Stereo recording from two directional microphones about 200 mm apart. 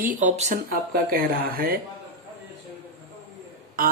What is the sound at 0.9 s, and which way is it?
Speech, 50° right (ahead or behind).